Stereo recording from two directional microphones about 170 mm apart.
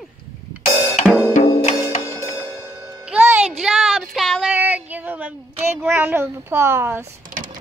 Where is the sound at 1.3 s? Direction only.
35° left (ahead or behind).